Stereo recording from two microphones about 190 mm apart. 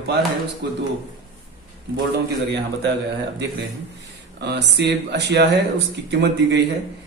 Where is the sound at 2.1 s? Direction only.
65° right (ahead or behind).